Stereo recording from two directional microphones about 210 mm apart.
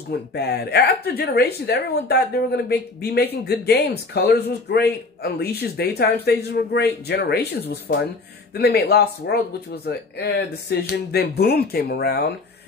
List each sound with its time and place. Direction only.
0.1 s a man's voice: 50° left (ahead or behind)